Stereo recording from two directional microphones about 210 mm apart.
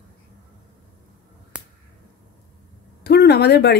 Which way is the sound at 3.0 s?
50° left (ahead or behind).